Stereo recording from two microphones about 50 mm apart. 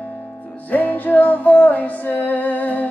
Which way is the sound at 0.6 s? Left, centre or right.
Left.